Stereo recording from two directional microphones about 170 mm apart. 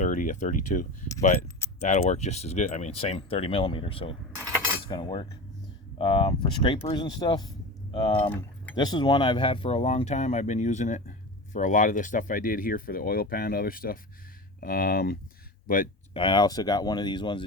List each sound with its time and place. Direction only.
0.0 s speech: 50° left (ahead or behind)
16.1 s speech: 30° left (ahead or behind)